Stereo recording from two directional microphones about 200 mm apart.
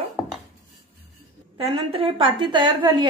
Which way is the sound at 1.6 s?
30° right (ahead or behind).